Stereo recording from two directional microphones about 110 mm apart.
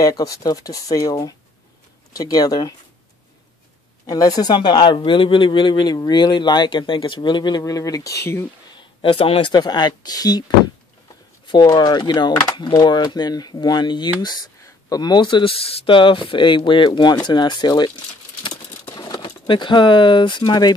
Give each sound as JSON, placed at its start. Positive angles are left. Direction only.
{"t": 0.0, "sound": "a man's voice", "side_deg": 30}
{"t": 4.0, "sound": "a man's voice", "side_deg": 30}
{"t": 8.7, "sound": "a sound", "side_deg": 55}
{"t": 9.5, "sound": "a man's voice", "side_deg": 40}
{"t": 11.4, "sound": "a man's voice", "side_deg": 50}
{"t": 18.4, "sound": "a sound", "side_deg": 40}
{"t": 19.2, "sound": "speech", "side_deg": 50}